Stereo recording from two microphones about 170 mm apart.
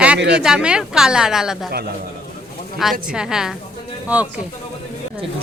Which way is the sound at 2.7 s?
Centre (ahead or behind).